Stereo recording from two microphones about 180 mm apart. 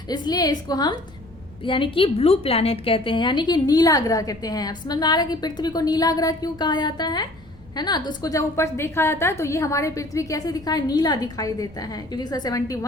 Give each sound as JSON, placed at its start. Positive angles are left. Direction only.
{"t": 0.1, "sound": "a woman's voice", "side_deg": 20}